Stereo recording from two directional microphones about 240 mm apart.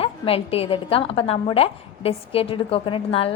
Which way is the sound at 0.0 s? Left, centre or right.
Left.